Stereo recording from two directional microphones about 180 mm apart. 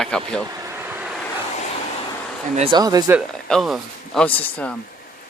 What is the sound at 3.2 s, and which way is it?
Speech, centre (ahead or behind).